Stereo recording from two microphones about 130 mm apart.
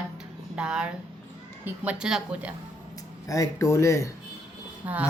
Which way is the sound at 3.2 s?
25° left (ahead or behind).